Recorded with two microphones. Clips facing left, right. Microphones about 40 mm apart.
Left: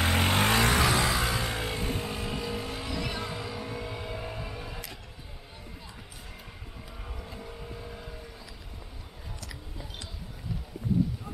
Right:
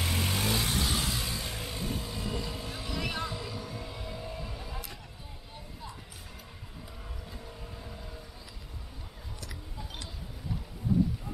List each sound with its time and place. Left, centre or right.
0.0 s music: left
1.7 s vehicle: left
2.9 s vehicle: centre
3.3 s music: left
4.5 s a sound: centre
7.4 s vehicle: centre